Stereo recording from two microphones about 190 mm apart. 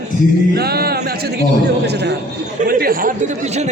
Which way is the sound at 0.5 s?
55° right (ahead or behind).